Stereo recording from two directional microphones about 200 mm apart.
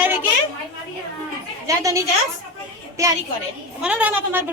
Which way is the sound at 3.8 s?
5° right (ahead or behind).